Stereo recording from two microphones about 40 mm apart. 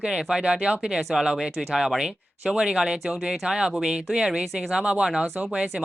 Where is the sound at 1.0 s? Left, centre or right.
Centre.